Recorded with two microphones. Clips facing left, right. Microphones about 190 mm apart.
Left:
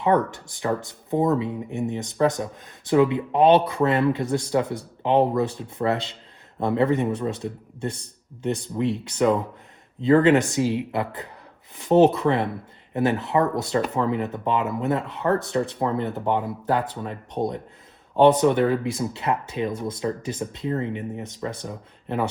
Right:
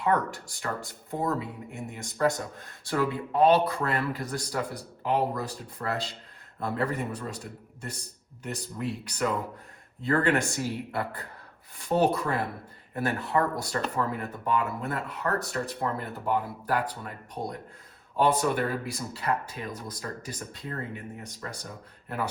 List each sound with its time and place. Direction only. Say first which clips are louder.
0.0 s speech: left 6 dB; 20° left (ahead or behind)